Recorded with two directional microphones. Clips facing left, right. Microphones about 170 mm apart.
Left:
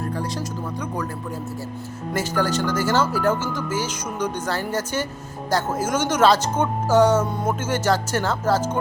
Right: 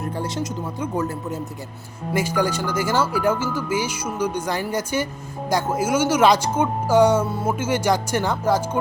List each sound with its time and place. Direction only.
0.0 s speech: 25° right (ahead or behind)
2.1 s a woman's voice: 10° right (ahead or behind)